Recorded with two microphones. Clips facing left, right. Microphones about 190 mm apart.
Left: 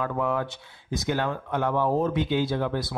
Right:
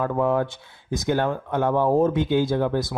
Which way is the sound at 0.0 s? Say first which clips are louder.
Right 5 dB; 45° right (ahead or behind).